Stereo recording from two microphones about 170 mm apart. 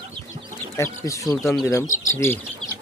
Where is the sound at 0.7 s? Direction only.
20° left (ahead or behind).